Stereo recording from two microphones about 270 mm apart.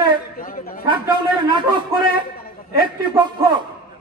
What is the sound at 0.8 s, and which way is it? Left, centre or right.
Speech, centre.